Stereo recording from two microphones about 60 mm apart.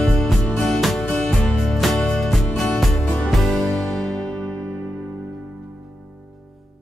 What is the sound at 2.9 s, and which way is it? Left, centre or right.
Music, left.